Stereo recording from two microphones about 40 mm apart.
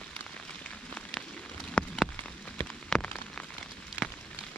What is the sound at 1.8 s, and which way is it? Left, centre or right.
Rain on surface, left.